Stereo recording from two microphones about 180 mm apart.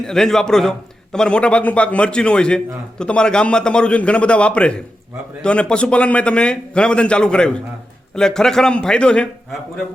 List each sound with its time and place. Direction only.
0.0 s a man's voice: 5° left (ahead or behind)